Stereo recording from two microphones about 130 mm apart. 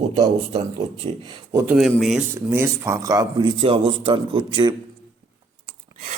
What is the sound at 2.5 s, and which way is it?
Speech, 20° right (ahead or behind).